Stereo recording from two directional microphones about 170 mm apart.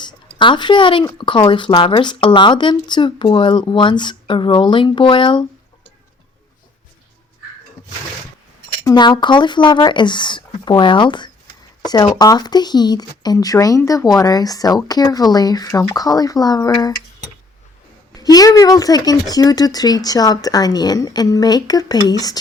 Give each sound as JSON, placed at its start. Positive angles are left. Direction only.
{"t": 0.0, "sound": "speech", "side_deg": 30}
{"t": 8.8, "sound": "speech", "side_deg": 25}
{"t": 18.1, "sound": "speech", "side_deg": 25}